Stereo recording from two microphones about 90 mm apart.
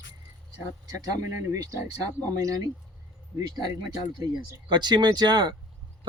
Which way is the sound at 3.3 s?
50° right (ahead or behind).